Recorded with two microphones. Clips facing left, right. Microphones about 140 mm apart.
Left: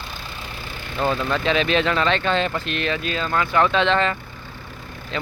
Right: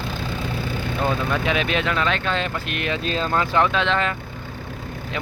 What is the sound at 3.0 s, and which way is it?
Speech, 35° right (ahead or behind).